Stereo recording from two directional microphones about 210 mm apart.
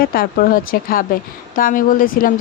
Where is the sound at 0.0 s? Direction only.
45° left (ahead or behind).